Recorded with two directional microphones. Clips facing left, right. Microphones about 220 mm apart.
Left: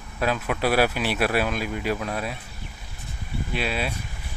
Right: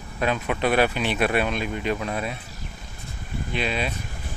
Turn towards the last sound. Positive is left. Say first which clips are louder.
# right 1 dB
turn(degrees=5)  # may be behind; listen again after turning